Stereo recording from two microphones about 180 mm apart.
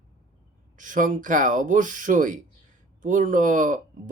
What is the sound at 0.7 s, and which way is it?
Speech, 45° right (ahead or behind).